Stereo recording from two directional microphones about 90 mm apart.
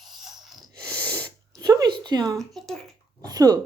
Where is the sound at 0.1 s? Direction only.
Centre (ahead or behind).